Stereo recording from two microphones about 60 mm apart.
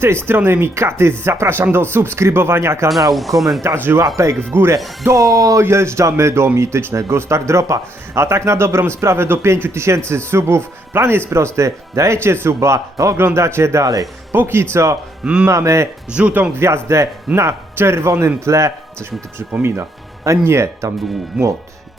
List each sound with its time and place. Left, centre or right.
0.3 s a man's voice: right
3.1 s speech: centre
3.9 s speech: right
4.4 s speech: right
5.0 s speech: right
5.6 s a man's voice: right
13.8 s speech: right
14.3 s a man's voice: right
15.2 s speech: centre
15.4 s speech: right
16.0 s speech: centre
16.6 s a man's voice: right
20.4 s a man's voice: right
21.3 s speech: centre